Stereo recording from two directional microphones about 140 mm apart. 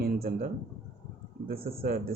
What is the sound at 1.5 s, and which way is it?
Speech, 90° right.